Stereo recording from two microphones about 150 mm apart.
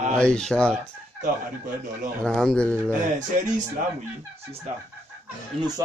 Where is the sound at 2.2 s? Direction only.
5° left (ahead or behind).